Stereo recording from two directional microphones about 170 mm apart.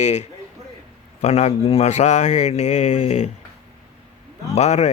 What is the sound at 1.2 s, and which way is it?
Speech, 40° left (ahead or behind).